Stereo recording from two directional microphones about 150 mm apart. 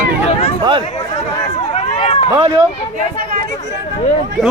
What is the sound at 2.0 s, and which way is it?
Run, 40° left (ahead or behind).